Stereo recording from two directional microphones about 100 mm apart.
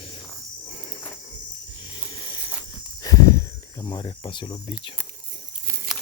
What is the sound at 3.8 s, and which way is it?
Speech, 45° left (ahead or behind).